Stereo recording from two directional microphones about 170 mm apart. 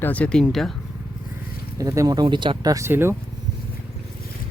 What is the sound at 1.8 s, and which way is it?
Speech, 20° right (ahead or behind).